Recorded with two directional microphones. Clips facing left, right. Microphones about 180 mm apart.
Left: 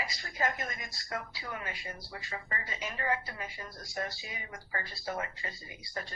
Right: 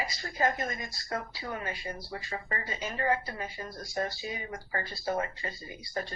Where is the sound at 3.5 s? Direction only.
20° right (ahead or behind).